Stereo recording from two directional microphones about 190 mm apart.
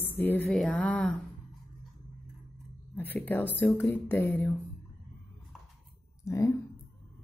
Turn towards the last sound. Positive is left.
turn(degrees=15)  # may be behind; listen again after turning